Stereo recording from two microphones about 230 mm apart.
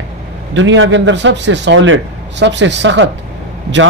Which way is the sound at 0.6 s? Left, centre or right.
Right.